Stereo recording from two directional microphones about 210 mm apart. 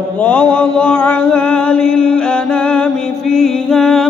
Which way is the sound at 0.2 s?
5° left (ahead or behind).